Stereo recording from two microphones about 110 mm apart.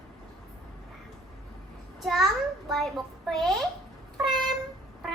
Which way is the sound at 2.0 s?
Centre (ahead or behind).